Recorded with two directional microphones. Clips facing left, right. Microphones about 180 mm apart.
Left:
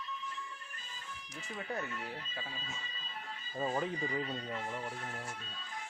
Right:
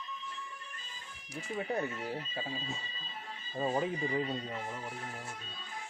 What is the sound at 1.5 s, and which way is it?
Speech, 25° right (ahead or behind).